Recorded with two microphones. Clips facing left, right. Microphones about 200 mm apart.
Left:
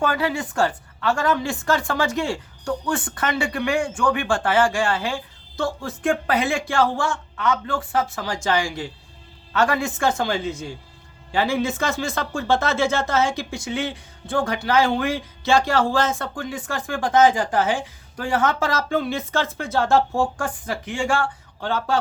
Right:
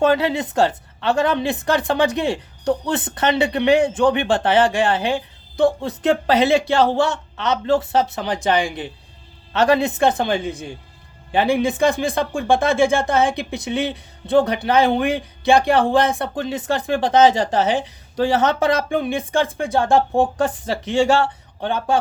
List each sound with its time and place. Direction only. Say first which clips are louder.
0.0 s speech: right 6 dB; 20° right (ahead or behind)
14.3 s speech: right 5 dB; 20° right (ahead or behind)